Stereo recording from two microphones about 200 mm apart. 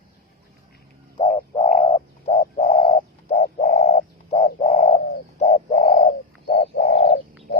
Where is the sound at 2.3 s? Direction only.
35° left (ahead or behind).